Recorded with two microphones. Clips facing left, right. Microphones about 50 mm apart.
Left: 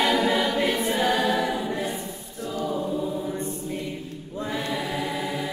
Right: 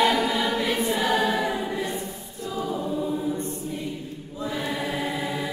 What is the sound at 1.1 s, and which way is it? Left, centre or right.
Choir, centre.